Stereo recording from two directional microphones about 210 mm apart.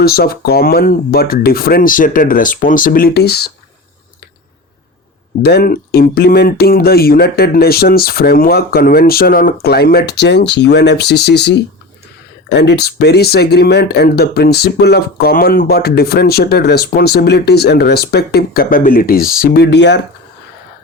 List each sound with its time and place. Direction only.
0.0 s speech: 45° left (ahead or behind)
5.4 s speech: 50° left (ahead or behind)